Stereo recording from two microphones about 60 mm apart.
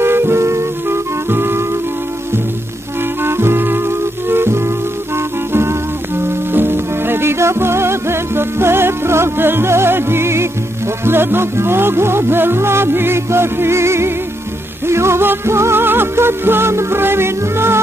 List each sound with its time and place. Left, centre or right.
0.0 s music: right
3.2 s music: right